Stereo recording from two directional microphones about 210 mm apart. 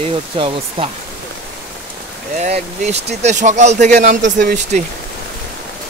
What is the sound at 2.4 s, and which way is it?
Speech, 30° right (ahead or behind).